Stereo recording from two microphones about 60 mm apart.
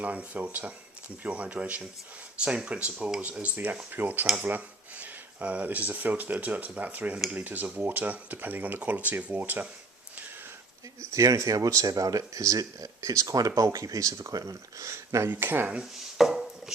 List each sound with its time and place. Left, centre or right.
0.0 s speech: right
11.0 s speech: right
15.3 s speech: right
15.8 s chopping: centre